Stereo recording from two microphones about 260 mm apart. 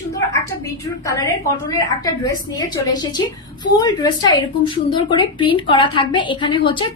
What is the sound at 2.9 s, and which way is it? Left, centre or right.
A woman's voice, centre.